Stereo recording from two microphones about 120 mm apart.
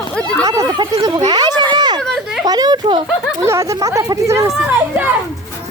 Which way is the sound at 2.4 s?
35° right (ahead or behind).